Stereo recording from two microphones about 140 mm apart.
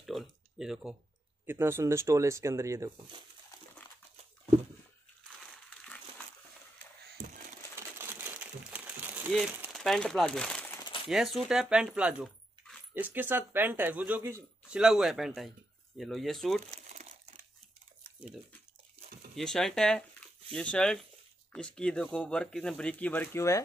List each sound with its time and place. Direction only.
0.0 s a sound: centre (ahead or behind)
1.4 s speech: 15° right (ahead or behind)
8.0 s crumpling: 15° right (ahead or behind)
9.3 s speech: 5° right (ahead or behind)
16.9 s crumpling: 55° right (ahead or behind)
18.0 s dog: 10° right (ahead or behind)
19.3 s speech: 5° left (ahead or behind); by 23.6 s 20° left (ahead or behind)